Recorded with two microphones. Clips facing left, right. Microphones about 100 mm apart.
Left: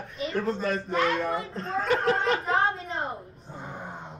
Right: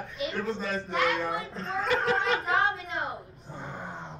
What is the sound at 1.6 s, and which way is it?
Chuckle, 35° left (ahead or behind).